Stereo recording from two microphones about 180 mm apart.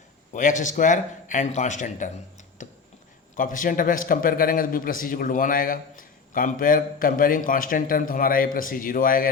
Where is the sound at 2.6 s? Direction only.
45° left (ahead or behind).